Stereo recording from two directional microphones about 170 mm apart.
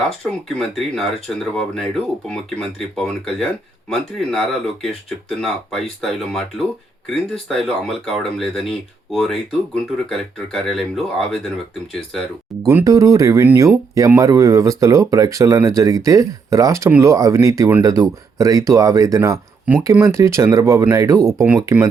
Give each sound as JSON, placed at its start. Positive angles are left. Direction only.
{"t": 0.4, "sound": "speech", "side_deg": 0}
{"t": 12.6, "sound": "speech", "side_deg": -20}